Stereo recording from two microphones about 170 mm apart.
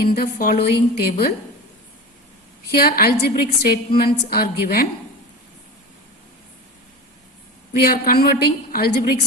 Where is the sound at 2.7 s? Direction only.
65° left (ahead or behind).